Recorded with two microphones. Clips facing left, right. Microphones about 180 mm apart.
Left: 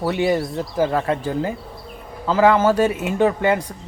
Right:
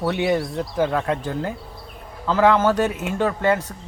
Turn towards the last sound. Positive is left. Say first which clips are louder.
# left 3 dB
turn(degrees=10)  # may be behind; listen again after turning